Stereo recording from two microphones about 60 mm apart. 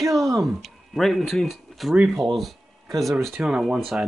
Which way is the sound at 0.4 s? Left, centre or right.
Centre.